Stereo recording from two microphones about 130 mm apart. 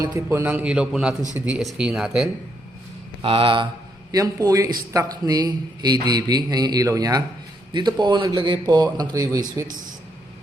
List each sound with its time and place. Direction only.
0.1 s a man's voice: 15° right (ahead or behind)
3.2 s a man's voice: 45° right (ahead or behind)
4.1 s a man's voice: 25° right (ahead or behind)